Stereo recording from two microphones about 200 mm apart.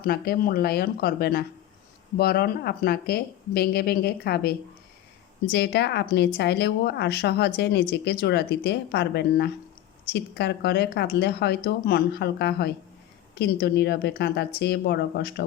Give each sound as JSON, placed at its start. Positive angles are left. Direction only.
{"t": 0.0, "sound": "a woman's voice", "side_deg": 50}